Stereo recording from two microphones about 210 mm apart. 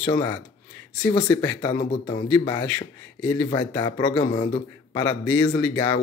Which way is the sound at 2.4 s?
15° left (ahead or behind).